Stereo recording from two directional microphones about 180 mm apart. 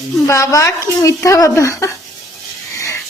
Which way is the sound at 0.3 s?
15° left (ahead or behind).